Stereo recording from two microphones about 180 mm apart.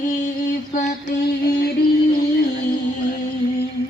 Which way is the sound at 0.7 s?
40° left (ahead or behind).